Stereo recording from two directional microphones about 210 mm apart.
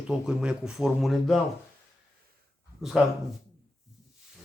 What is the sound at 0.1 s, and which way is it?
Speech, centre (ahead or behind).